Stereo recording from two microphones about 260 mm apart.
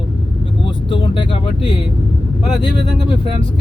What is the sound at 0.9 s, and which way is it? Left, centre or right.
Vehicle, centre.